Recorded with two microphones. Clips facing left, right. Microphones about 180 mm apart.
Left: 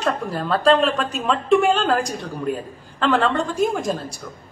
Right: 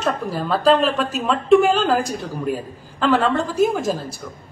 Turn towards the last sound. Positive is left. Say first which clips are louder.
# right 2 dB
turn(degrees=0)  # may be behind; listen again after turning